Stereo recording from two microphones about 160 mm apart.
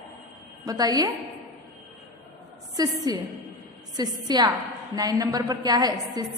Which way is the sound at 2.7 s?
25° right (ahead or behind).